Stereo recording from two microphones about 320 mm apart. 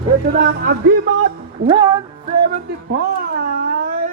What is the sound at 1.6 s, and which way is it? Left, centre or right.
Music, centre.